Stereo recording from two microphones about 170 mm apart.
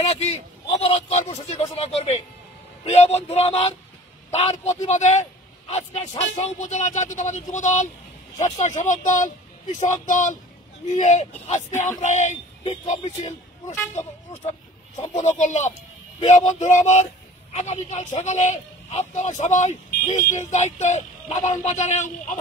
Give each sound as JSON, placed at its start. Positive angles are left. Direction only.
{"t": 0.0, "sound": "a man's voice", "side_deg": 35}
{"t": 15.1, "sound": "a man's voice", "side_deg": 45}
{"t": 20.1, "sound": "speech", "side_deg": 25}
{"t": 20.3, "sound": "a man's voice", "side_deg": 45}